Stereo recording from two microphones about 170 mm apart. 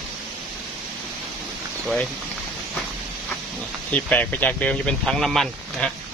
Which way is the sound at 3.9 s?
10° left (ahead or behind).